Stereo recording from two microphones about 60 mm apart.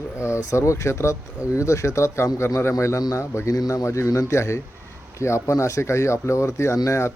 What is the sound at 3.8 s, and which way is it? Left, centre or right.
Speech, left.